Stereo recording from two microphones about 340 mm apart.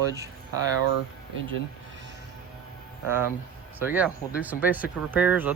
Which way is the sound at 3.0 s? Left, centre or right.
Centre.